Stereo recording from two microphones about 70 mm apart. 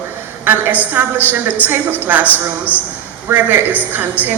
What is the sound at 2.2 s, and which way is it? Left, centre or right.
Speech, left.